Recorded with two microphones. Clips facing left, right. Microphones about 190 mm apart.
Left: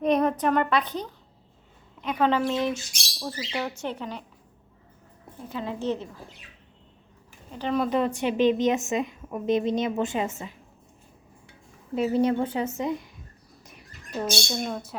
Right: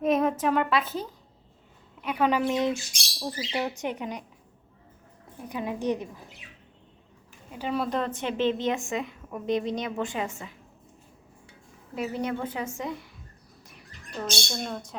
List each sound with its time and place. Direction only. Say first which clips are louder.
0.0 s a woman's voice: left 1 dB; 5° right (ahead or behind)
5.5 s speech: even; 15° right (ahead or behind)
7.5 s speech: left 3 dB; 10° right (ahead or behind)
7.9 s a woman's voice: left 4 dB; 10° left (ahead or behind); by 10.5 s 25° left (ahead or behind)
11.9 s a woman's voice: left 7 dB; 30° left (ahead or behind)
14.5 s speech: left 3 dB; 5° left (ahead or behind)